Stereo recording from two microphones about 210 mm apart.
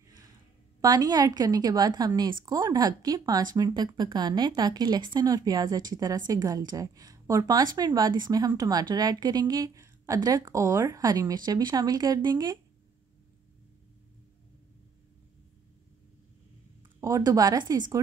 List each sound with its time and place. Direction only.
0.7 s a woman's voice: 20° right (ahead or behind)
17.0 s speech: 15° right (ahead or behind)